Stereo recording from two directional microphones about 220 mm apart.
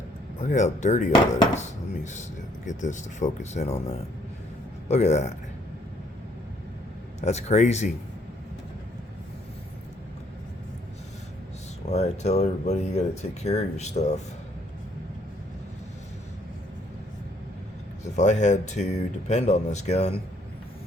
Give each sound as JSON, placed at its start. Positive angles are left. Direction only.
{"t": 0.4, "sound": "speech", "side_deg": 35}
{"t": 7.2, "sound": "speech", "side_deg": 30}
{"t": 11.9, "sound": "speech", "side_deg": 30}
{"t": 18.2, "sound": "speech", "side_deg": 30}